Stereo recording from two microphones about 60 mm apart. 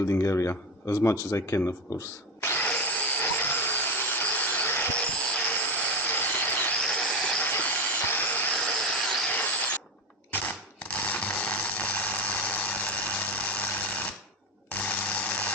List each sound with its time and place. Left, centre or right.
0.1 s speech: left
2.6 s a sound: left
4.9 s vehicle: centre
6.7 s train: centre
7.4 s vehicle: left
8.5 s vehicle: centre
9.3 s mechanisms: left
10.3 s a sound: left